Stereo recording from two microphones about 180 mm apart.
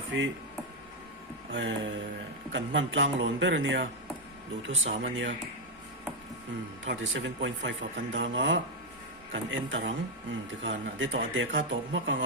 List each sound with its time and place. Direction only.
0.1 s a man's voice: 90° right
1.5 s a man's voice: 90° right
6.8 s a man's voice: 90° right